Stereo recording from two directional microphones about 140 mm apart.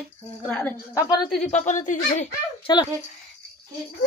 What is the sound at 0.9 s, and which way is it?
Speech, 30° left (ahead or behind).